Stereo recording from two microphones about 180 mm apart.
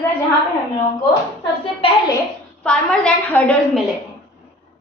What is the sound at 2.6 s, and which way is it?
A woman's voice, 5° left (ahead or behind).